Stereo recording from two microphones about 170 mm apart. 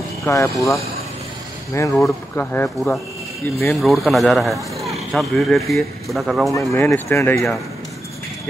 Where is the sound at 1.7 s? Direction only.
15° left (ahead or behind).